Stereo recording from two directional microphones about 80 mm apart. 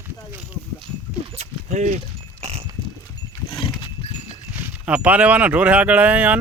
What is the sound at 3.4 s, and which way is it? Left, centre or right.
Horse, left.